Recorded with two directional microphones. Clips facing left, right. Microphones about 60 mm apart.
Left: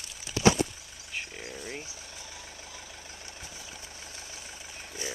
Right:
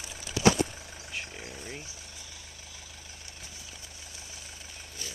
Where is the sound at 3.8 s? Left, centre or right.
Left.